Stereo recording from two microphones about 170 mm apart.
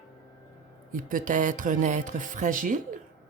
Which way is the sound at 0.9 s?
50° right (ahead or behind).